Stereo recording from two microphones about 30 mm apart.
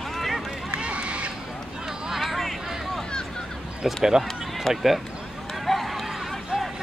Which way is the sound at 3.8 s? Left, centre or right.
Centre.